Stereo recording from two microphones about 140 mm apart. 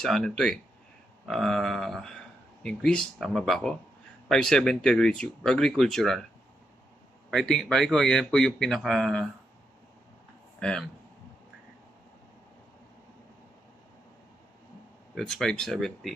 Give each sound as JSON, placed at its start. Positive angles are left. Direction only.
{"t": 0.0, "sound": "speech", "side_deg": 5}
{"t": 7.2, "sound": "speech", "side_deg": 0}
{"t": 10.6, "sound": "speech", "side_deg": 5}
{"t": 15.1, "sound": "speech", "side_deg": 0}